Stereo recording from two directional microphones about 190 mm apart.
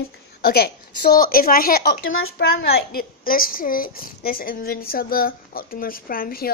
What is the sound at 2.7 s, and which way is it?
A woman's voice, 50° left (ahead or behind).